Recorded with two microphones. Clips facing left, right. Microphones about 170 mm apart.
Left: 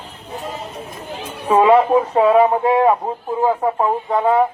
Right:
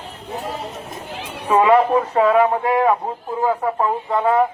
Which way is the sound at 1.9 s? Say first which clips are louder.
Left 2 dB; 5° left (ahead or behind).